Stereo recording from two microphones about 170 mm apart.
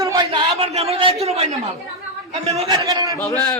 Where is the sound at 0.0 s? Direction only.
20° right (ahead or behind).